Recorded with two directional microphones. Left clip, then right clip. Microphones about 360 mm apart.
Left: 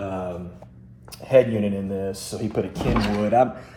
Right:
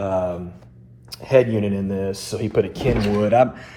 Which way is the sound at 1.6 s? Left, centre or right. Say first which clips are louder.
Right 2 dB; centre.